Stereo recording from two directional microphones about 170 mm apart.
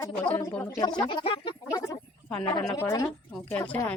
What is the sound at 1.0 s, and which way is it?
Speech, 30° left (ahead or behind).